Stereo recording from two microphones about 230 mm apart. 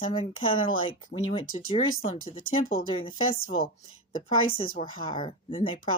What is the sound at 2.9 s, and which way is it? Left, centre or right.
Speech, left.